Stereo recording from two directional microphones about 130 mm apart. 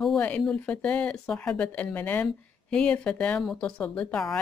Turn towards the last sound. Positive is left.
turn(degrees=5)  # may be behind; listen again after turning